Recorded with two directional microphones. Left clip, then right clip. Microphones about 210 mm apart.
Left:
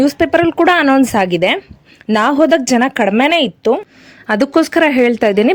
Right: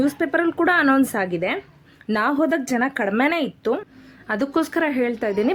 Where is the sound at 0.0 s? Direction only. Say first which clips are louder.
Left 9 dB; 35° left (ahead or behind).